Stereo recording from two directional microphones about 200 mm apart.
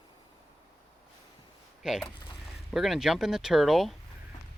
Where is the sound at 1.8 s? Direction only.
Centre (ahead or behind).